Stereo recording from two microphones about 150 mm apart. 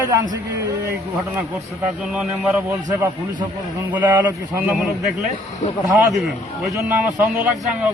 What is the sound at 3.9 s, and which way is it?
Speech, 10° right (ahead or behind).